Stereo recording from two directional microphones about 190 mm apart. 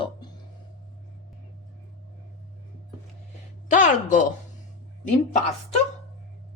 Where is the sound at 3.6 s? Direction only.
40° left (ahead or behind).